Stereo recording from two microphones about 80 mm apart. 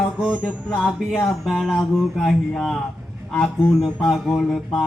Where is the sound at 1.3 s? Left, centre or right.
Centre.